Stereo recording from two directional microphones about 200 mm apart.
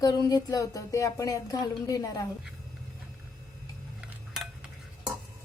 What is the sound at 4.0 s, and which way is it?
Cutlery, centre (ahead or behind).